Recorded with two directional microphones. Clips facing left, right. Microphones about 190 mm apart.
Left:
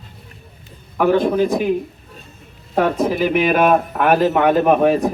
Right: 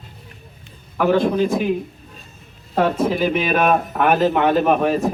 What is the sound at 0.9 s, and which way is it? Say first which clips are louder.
Speech: left 2 dB; 15° left (ahead or behind).